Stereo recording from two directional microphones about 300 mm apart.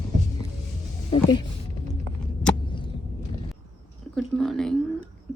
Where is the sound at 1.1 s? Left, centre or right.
Centre.